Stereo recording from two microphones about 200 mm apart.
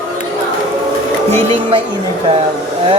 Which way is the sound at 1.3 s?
30° right (ahead or behind).